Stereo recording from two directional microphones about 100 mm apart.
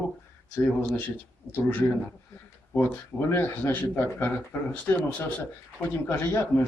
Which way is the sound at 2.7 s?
25° left (ahead or behind).